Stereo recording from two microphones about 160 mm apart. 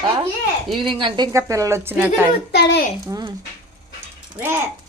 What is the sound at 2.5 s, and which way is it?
Speech, 90° left.